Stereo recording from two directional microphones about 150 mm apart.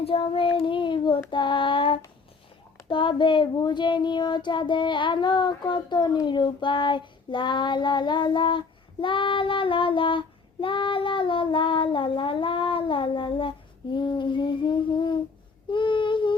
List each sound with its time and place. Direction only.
0.0 s child singing: 35° left (ahead or behind)